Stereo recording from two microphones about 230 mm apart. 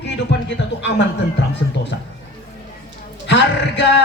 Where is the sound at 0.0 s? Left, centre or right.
Left.